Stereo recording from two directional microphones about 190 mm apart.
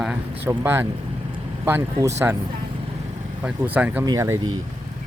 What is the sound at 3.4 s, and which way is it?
Speech, 10° right (ahead or behind).